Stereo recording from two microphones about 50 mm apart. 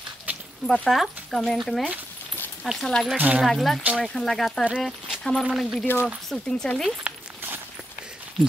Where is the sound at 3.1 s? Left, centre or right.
Right.